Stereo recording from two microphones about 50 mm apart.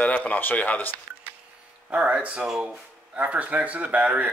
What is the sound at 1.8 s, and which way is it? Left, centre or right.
Speech, right.